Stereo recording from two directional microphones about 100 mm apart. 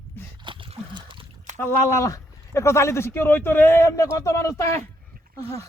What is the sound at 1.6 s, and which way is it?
Speech, 25° left (ahead or behind).